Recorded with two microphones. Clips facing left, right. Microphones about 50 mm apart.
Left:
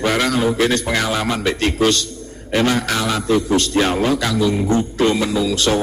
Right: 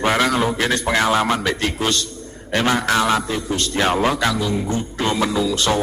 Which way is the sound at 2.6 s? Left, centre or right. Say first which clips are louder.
Even; centre.